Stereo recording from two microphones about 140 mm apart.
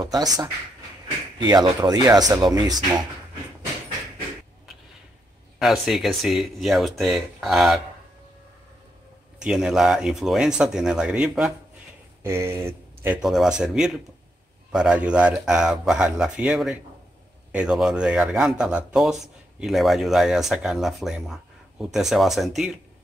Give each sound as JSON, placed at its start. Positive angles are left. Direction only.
{"t": 0.0, "sound": "speech", "side_deg": -25}
{"t": 5.6, "sound": "speech", "side_deg": 0}
{"t": 9.4, "sound": "speech", "side_deg": -5}
{"t": 12.2, "sound": "speech", "side_deg": -20}
{"t": 13.2, "sound": "speech", "side_deg": -5}